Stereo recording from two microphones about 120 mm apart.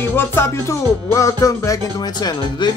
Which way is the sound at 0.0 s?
20° left (ahead or behind).